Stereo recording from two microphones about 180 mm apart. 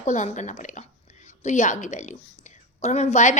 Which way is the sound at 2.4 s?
40° left (ahead or behind).